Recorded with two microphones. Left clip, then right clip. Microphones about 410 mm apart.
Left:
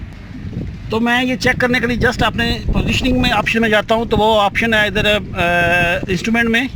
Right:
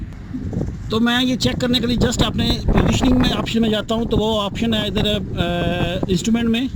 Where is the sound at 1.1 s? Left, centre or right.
Left.